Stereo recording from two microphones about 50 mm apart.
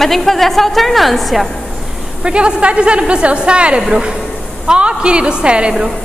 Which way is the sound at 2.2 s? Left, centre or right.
Centre.